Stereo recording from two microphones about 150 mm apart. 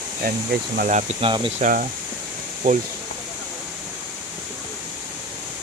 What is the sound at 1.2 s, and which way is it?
Speech, 35° right (ahead or behind).